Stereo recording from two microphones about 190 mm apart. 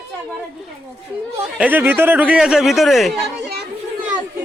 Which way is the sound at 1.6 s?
10° right (ahead or behind).